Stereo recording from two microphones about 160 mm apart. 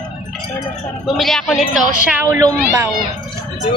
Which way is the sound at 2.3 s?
20° right (ahead or behind).